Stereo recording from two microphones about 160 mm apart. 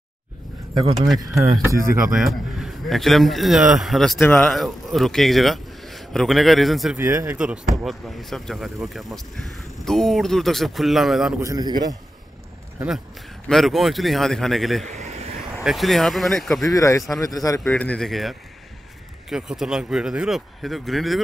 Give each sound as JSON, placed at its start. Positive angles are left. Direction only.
{"t": 0.9, "sound": "speech", "side_deg": 0}
{"t": 1.4, "sound": "a man's voice", "side_deg": -20}
{"t": 2.1, "sound": "speech", "side_deg": 0}
{"t": 4.2, "sound": "speech", "side_deg": 10}
{"t": 4.5, "sound": "a man's voice", "side_deg": 0}
{"t": 7.0, "sound": "speech", "side_deg": -15}
{"t": 7.3, "sound": "speech", "side_deg": -5}
{"t": 11.4, "sound": "a man's voice", "side_deg": -25}
{"t": 13.5, "sound": "speech", "side_deg": 0}
{"t": 14.9, "sound": "a sound", "side_deg": -40}
{"t": 15.6, "sound": "speech", "side_deg": 0}
{"t": 16.7, "sound": "speech", "side_deg": 20}
{"t": 17.6, "sound": "speech", "side_deg": 10}